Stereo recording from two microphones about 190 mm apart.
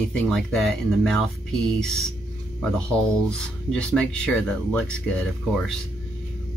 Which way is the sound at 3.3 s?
5° left (ahead or behind).